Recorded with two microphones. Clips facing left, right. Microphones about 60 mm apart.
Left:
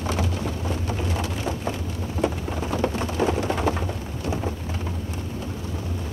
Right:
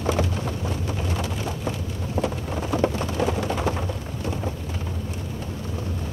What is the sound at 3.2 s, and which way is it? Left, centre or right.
Vehicle, left.